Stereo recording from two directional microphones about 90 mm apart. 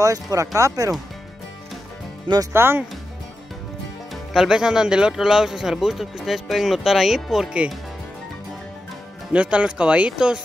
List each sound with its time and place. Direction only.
0.0 s speech: 40° right (ahead or behind)
2.5 s speech: 25° right (ahead or behind)
4.1 s speech: centre (ahead or behind)
9.3 s speech: 15° right (ahead or behind)